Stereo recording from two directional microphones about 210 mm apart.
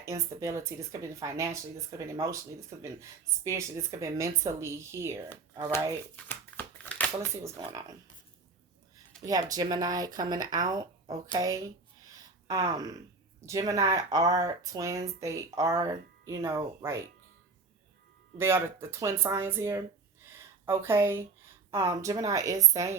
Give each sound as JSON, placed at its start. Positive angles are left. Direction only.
{"t": 0.0, "sound": "speech", "side_deg": -15}
{"t": 6.2, "sound": "crumpling", "side_deg": 5}
{"t": 7.2, "sound": "speech", "side_deg": -15}
{"t": 9.2, "sound": "speech", "side_deg": -15}
{"t": 18.3, "sound": "speech", "side_deg": -10}
{"t": 20.2, "sound": "a sound", "side_deg": -10}
{"t": 21.7, "sound": "speech", "side_deg": -15}